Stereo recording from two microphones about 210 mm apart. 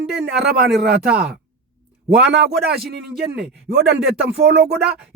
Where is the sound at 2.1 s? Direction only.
55° right (ahead or behind).